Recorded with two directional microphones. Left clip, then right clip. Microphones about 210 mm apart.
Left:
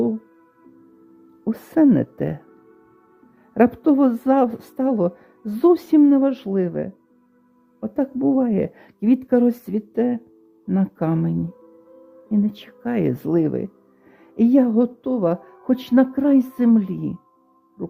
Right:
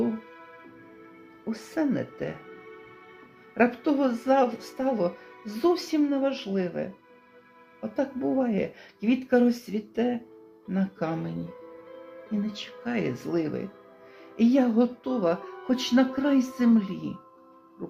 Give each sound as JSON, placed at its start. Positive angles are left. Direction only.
{"t": 1.5, "sound": "speech", "side_deg": 50}
{"t": 3.5, "sound": "speech", "side_deg": 45}
{"t": 12.5, "sound": "speech", "side_deg": 50}